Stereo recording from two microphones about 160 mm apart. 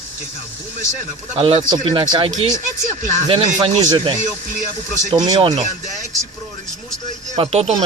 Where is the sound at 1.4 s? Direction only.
35° right (ahead or behind).